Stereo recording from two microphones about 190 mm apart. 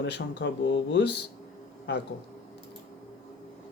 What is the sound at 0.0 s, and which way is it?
A man's voice, 65° left (ahead or behind).